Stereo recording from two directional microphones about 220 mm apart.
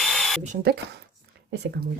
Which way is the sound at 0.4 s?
40° right (ahead or behind).